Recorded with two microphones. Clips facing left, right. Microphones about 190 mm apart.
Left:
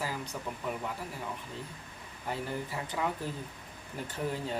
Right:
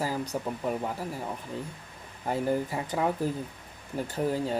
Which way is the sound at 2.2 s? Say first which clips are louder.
Right 8 dB; 45° right (ahead or behind).